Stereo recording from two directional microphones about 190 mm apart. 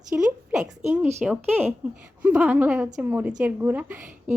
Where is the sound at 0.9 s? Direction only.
10° right (ahead or behind).